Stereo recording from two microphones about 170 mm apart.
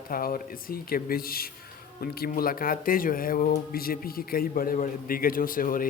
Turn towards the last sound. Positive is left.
turn(degrees=55)  # may be behind; listen again after turning